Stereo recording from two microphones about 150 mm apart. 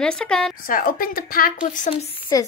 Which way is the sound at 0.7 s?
65° left (ahead or behind).